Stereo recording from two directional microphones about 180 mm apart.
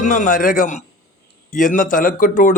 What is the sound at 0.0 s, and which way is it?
Speech, 45° left (ahead or behind).